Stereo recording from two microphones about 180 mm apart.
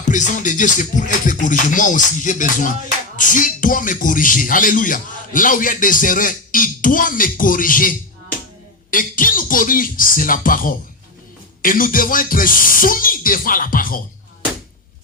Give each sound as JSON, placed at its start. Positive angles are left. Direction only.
{"t": 0.0, "sound": "speech", "side_deg": 45}